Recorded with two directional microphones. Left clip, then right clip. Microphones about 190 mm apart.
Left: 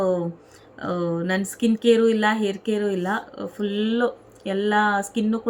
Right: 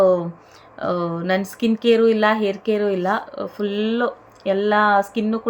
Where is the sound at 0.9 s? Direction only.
80° right.